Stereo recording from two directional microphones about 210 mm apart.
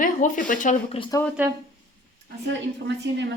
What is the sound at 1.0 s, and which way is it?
Speech, 15° left (ahead or behind).